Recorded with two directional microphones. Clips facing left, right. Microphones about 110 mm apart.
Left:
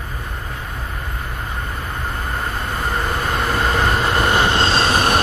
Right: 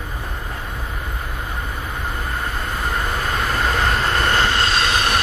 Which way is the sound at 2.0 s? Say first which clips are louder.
Left 1 dB; centre (ahead or behind).